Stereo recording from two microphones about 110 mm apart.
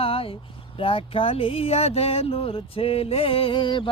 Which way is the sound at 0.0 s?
55° left (ahead or behind).